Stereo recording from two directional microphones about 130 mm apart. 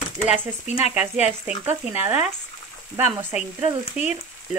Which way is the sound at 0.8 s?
10° right (ahead or behind).